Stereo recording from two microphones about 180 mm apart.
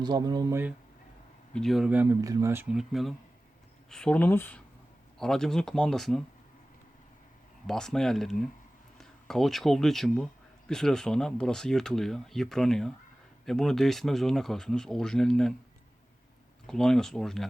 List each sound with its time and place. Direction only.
0.0 s speech: 25° right (ahead or behind)
1.5 s speech: centre (ahead or behind)
7.7 s speech: 5° left (ahead or behind)
16.6 s speech: 5° left (ahead or behind)